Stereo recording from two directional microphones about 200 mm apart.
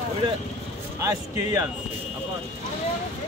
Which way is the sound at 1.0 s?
15° right (ahead or behind).